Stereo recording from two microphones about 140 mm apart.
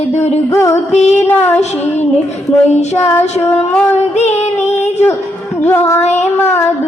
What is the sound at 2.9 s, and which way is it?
Child singing, 20° left (ahead or behind).